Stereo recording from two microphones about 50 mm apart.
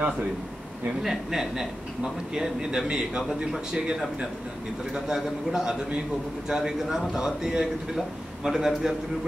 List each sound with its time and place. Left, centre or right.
1.0 s a man's voice: centre